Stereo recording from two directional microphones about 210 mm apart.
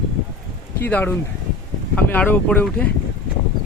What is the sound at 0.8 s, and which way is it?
Speech, 10° left (ahead or behind).